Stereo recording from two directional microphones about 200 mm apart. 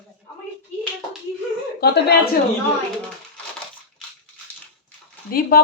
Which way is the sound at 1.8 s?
55° left (ahead or behind).